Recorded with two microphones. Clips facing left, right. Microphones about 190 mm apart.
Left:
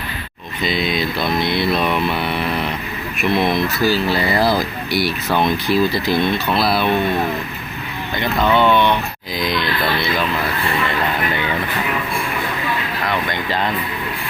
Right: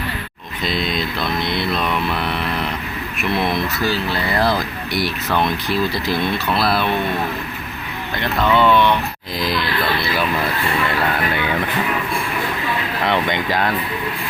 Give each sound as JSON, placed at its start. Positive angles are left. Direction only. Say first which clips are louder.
{"t": 0.6, "sound": "speech", "louder": "left 2 dB", "side_deg": 0}
{"t": 8.2, "sound": "speech", "louder": "left 1 dB", "side_deg": 0}
{"t": 9.4, "sound": "a sound", "louder": "left 1 dB", "side_deg": 0}
{"t": 13.1, "sound": "speech", "louder": "right 3 dB", "side_deg": -20}